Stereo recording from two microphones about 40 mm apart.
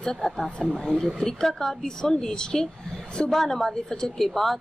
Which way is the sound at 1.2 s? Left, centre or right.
Centre.